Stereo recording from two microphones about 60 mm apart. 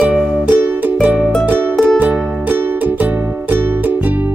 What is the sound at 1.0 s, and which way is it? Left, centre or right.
Music, centre.